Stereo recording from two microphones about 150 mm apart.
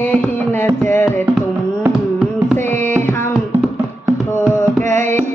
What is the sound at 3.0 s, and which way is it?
Music, 15° left (ahead or behind).